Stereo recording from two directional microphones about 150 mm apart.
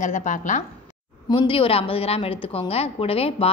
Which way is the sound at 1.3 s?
35° left (ahead or behind).